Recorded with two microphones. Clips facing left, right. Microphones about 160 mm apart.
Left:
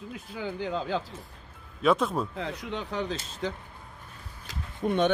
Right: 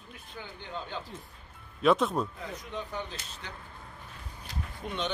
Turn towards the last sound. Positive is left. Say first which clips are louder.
# left 10 dB
turn(degrees=55)  # may be behind; listen again after turning